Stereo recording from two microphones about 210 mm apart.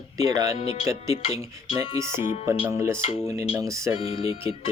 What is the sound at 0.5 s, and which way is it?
Speech, 25° left (ahead or behind).